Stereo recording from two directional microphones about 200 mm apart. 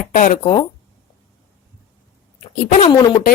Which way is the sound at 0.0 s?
40° left (ahead or behind).